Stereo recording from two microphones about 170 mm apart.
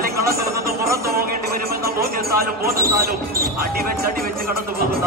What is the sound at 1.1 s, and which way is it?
Speech, 60° right (ahead or behind).